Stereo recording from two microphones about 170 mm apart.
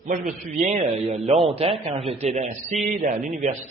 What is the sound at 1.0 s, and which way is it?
A man's voice, 35° right (ahead or behind).